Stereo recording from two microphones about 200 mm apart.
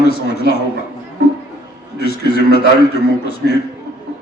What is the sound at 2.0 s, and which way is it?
A man's voice, 55° left (ahead or behind).